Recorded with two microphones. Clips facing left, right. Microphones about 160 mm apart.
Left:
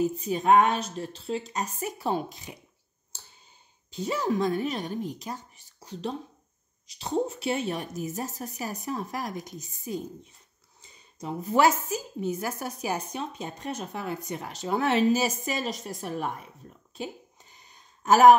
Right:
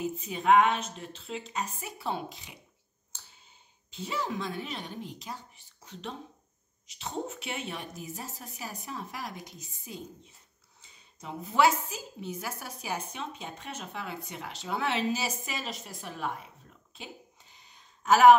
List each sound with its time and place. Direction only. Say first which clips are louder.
0.0 s a woman's voice: left 5 dB; 40° left (ahead or behind)
3.1 s clicking: left 3 dB; 35° left (ahead or behind)
3.9 s a woman's voice: left 7 dB; 40° left (ahead or behind)
16.9 s a sound: left 9 dB; 45° left (ahead or behind)